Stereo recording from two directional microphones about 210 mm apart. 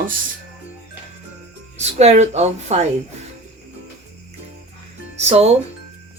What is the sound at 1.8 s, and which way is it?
A woman's voice, 30° right (ahead or behind).